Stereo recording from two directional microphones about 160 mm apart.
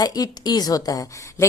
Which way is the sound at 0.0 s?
25° left (ahead or behind).